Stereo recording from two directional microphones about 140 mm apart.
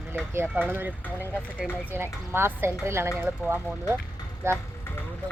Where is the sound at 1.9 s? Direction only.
15° right (ahead or behind).